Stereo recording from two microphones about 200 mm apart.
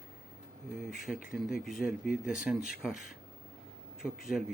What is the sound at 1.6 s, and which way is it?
Speech, 45° left (ahead or behind).